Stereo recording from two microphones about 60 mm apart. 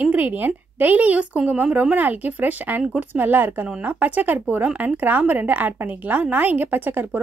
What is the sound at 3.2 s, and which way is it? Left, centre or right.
A woman's voice, right.